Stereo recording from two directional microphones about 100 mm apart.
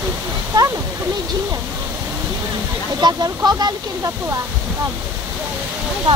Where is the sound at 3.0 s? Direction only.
45° right (ahead or behind).